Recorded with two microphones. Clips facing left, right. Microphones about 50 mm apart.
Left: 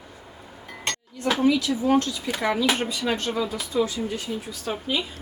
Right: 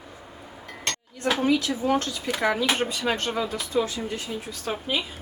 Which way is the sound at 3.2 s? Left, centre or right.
Right.